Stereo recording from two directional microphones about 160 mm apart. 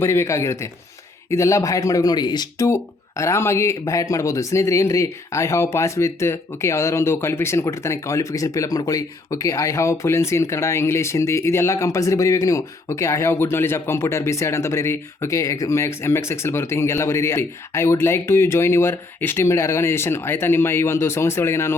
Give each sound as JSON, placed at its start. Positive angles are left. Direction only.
{"t": 0.0, "sound": "speech", "side_deg": 15}